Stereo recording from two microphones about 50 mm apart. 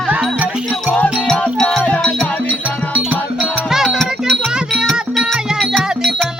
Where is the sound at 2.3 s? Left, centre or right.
Left.